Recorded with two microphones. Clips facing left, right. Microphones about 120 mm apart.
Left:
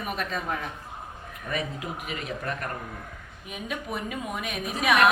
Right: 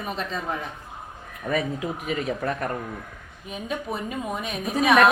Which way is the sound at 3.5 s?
30° right (ahead or behind).